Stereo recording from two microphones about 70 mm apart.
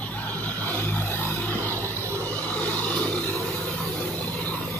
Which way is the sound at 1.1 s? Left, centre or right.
Left.